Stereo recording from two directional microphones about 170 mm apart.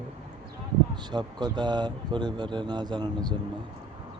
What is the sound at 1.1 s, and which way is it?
Speech, 25° right (ahead or behind).